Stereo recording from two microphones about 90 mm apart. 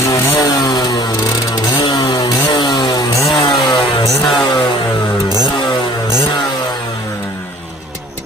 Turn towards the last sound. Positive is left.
turn(degrees=55)  # may be behind; listen again after turning